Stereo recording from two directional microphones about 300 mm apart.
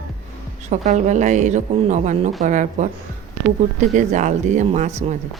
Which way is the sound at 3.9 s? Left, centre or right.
Right.